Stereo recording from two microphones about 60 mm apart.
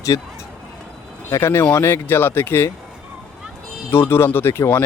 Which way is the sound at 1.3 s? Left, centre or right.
Left.